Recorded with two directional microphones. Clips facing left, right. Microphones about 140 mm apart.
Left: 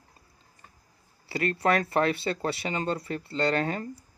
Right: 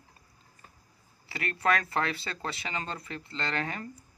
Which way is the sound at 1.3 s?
30° left (ahead or behind).